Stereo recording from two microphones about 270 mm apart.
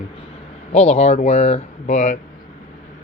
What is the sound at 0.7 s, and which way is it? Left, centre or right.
Speech, left.